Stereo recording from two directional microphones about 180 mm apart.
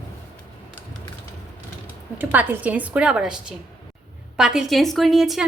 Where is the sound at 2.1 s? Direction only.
10° right (ahead or behind).